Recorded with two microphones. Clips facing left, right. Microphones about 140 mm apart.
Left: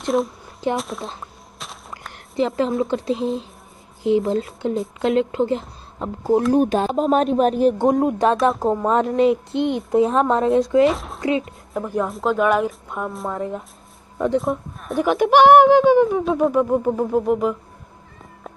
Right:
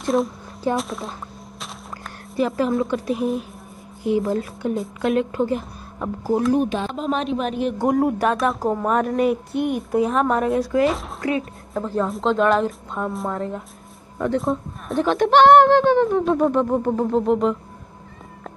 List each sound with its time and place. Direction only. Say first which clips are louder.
0.0 s a sound: even; centre (ahead or behind)
0.7 s speech: right 1 dB; centre (ahead or behind)
2.3 s speech: even; 25° left (ahead or behind)
6.5 s a woman's voice: left 4 dB; 40° left (ahead or behind)
7.8 s speech: left 2 dB; 20° left (ahead or behind)
10.9 s speech: left 2 dB; centre (ahead or behind)
11.1 s speech: left 2 dB; 20° left (ahead or behind); by 13.3 s 5° left (ahead or behind)
13.3 s speech: left 1 dB; 15° left (ahead or behind)
14.4 s speech: even; centre (ahead or behind)